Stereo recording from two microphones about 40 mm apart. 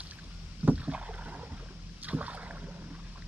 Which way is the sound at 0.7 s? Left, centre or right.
Right.